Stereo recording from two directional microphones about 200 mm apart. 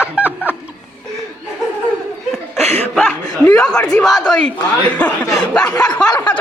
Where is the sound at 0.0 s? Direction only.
5° right (ahead or behind).